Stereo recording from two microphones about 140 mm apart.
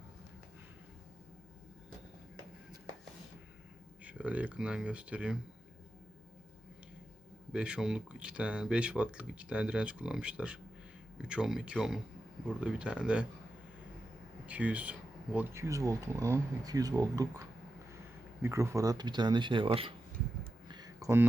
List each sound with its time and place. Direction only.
4.0 s speech: 10° right (ahead or behind)
7.5 s speech: 5° right (ahead or behind)
14.4 s speech: 10° right (ahead or behind); by 17.4 s 25° right (ahead or behind)
18.4 s speech: 20° right (ahead or behind); by 19.9 s 40° right (ahead or behind)
20.7 s a sound: 30° right (ahead or behind)